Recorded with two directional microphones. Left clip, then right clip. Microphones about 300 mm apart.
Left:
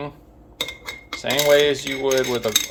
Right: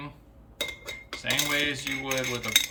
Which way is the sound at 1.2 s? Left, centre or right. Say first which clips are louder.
Left 10 dB; centre.